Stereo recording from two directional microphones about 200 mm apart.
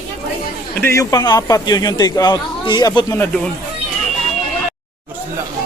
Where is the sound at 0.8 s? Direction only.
15° left (ahead or behind).